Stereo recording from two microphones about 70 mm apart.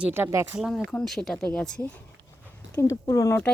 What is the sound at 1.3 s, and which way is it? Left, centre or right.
Speech, centre.